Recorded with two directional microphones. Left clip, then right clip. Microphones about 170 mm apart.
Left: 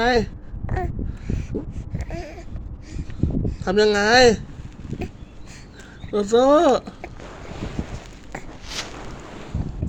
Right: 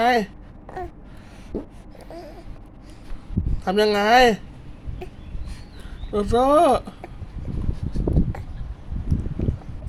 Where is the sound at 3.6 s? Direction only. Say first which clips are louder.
Left 1 dB; 30° right (ahead or behind).